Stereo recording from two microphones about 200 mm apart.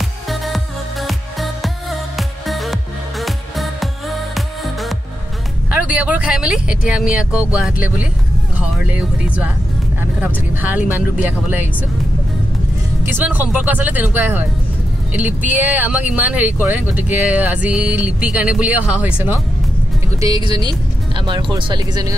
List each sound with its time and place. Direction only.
1.0 s music: centre (ahead or behind)
5.7 s speech: 5° right (ahead or behind)
13.0 s speech: 10° right (ahead or behind)
15.5 s speech: 10° right (ahead or behind)
20.2 s speech: 20° right (ahead or behind)